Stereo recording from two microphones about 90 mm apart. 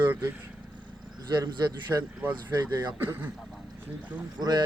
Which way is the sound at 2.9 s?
25° right (ahead or behind).